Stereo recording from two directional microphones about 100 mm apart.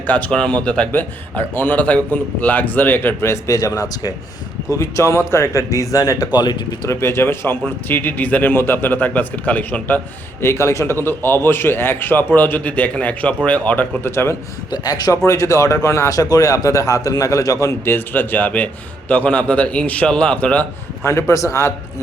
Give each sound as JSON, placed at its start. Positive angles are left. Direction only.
{"t": 0.1, "sound": "a man's voice", "side_deg": 10}
{"t": 6.8, "sound": "a man's voice", "side_deg": 25}
{"t": 10.4, "sound": "a man's voice", "side_deg": 25}
{"t": 14.0, "sound": "a man's voice", "side_deg": 25}
{"t": 14.7, "sound": "a man's voice", "side_deg": 40}
{"t": 17.9, "sound": "a man's voice", "side_deg": 20}
{"t": 21.0, "sound": "a man's voice", "side_deg": 30}